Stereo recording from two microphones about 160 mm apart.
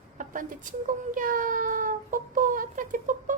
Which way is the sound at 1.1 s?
55° right (ahead or behind).